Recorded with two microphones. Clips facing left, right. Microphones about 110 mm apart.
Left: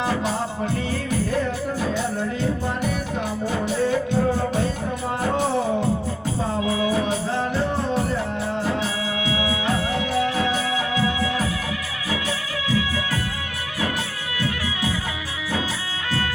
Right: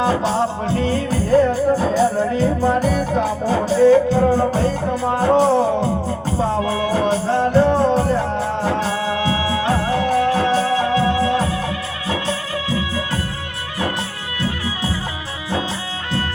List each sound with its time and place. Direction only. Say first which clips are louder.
0.0 s music: right 6 dB; 30° right (ahead or behind)
1.3 s music: right 10 dB; 35° right (ahead or behind)
6.9 s music: right 5 dB; 40° right (ahead or behind)
12.6 s music: left 1 dB; 40° right (ahead or behind)
14.3 s music: right 3 dB; 30° right (ahead or behind)